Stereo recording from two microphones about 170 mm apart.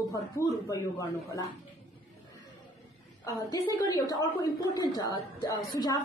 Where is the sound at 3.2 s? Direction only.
20° left (ahead or behind).